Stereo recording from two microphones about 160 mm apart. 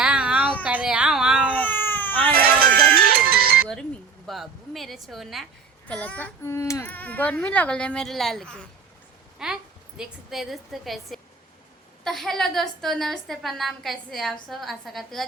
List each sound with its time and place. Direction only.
0.0 s a sound: 5° right (ahead or behind)
1.5 s baby cry: 10° left (ahead or behind)
2.3 s music: 70° right (ahead or behind)
4.3 s a woman's voice: centre (ahead or behind)